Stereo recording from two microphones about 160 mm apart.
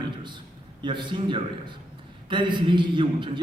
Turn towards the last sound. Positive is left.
turn(degrees=-30)  # may be behind; listen again after turning